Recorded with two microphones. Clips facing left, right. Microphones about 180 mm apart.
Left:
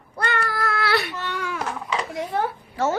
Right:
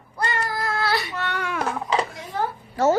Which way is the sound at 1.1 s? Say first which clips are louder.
Right 1 dB; 65° right (ahead or behind).